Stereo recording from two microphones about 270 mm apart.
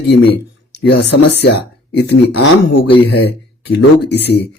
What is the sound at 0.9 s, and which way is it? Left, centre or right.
Speech, left.